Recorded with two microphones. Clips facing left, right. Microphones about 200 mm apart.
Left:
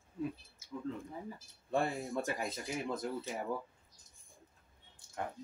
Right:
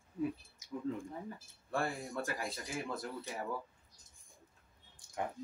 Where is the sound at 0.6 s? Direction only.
15° right (ahead or behind).